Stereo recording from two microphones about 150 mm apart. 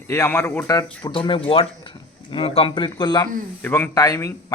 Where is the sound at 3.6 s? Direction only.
15° left (ahead or behind).